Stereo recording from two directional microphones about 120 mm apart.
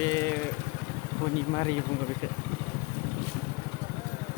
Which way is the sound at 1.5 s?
35° left (ahead or behind).